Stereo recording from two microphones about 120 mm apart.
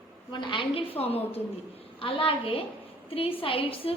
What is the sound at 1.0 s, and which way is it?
A woman's voice, 55° left (ahead or behind).